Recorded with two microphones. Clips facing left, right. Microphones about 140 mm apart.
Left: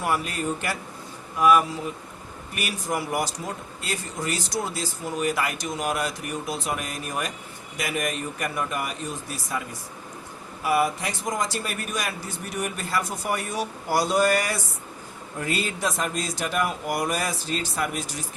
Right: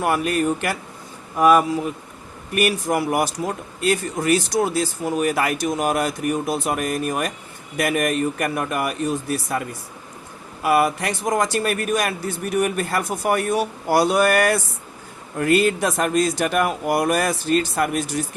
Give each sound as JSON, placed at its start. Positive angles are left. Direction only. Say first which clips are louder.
{"t": 0.0, "sound": "speech", "louder": "right 6 dB", "side_deg": -60}
{"t": 1.4, "sound": "speech", "louder": "right 4 dB", "side_deg": -45}
{"t": 2.6, "sound": "speech", "louder": "right 9 dB", "side_deg": -60}